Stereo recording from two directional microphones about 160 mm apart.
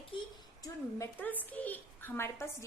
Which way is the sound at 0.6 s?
15° left (ahead or behind).